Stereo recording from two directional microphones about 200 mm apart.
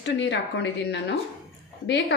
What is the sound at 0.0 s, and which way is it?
A woman's voice, 60° left (ahead or behind).